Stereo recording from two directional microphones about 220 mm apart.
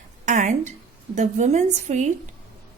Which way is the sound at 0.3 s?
35° right (ahead or behind).